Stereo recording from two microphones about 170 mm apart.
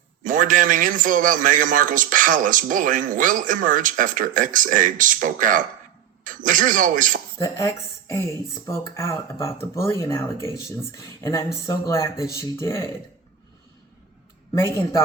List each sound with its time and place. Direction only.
0.2 s a man's voice: 50° right (ahead or behind)
7.3 s speech: 20° left (ahead or behind)
14.5 s speech: 15° left (ahead or behind)